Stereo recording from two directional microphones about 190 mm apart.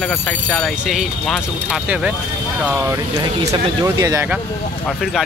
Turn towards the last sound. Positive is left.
turn(degrees=-15)  # may be behind; listen again after turning